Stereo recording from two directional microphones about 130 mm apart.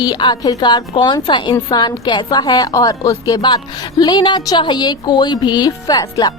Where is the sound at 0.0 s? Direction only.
35° left (ahead or behind).